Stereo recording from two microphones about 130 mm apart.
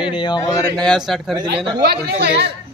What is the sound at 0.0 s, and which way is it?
Speech, 40° left (ahead or behind).